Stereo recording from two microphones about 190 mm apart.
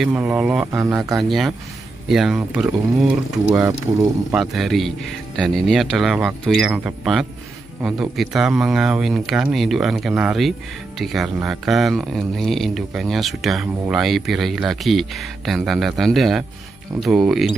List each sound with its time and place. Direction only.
0.0 s speech: 5° right (ahead or behind)
0.8 s speech: 20° right (ahead or behind)
1.1 s speech: centre (ahead or behind)